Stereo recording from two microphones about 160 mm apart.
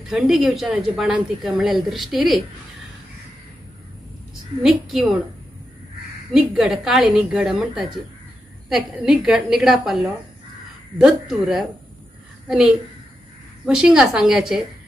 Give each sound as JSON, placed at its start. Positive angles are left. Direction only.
{"t": 0.1, "sound": "a woman's voice", "side_deg": -5}
{"t": 4.8, "sound": "a woman's voice", "side_deg": 0}
{"t": 6.3, "sound": "a woman's voice", "side_deg": 0}